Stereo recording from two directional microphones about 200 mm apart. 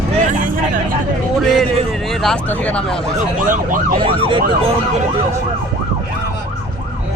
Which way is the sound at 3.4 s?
40° right (ahead or behind).